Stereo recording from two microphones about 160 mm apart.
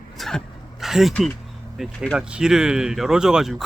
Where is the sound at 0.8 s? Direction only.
Centre (ahead or behind).